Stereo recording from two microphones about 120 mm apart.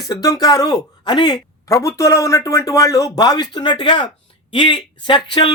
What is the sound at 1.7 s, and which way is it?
Speech, 25° left (ahead or behind).